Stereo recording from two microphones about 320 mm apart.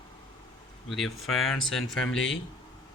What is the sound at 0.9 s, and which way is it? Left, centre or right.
Speech, centre.